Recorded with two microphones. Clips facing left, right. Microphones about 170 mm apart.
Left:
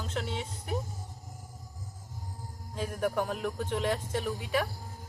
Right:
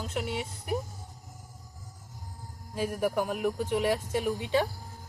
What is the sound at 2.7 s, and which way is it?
Speech, 5° right (ahead or behind).